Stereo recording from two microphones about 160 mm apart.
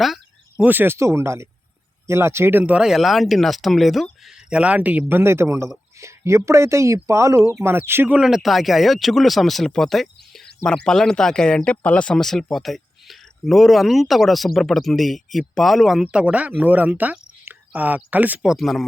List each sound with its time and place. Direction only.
0.6 s speech: 10° right (ahead or behind)